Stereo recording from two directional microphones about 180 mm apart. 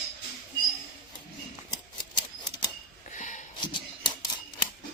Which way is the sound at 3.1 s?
45° left (ahead or behind).